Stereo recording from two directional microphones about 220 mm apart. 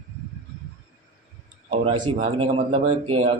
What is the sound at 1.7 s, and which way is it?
A man's voice, 25° right (ahead or behind).